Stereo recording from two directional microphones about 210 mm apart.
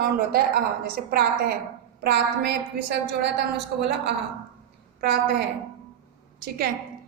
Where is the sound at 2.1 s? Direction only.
50° right (ahead or behind).